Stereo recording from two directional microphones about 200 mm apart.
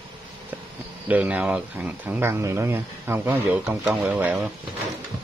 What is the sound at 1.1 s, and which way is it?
Speech, 5° right (ahead or behind).